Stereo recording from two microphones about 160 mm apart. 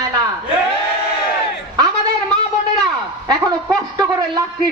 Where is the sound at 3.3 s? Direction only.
25° right (ahead or behind).